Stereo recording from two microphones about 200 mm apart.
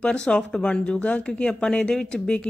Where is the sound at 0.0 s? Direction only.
5° left (ahead or behind).